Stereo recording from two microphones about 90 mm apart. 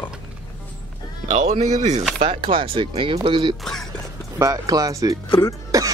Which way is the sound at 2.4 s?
75° right (ahead or behind).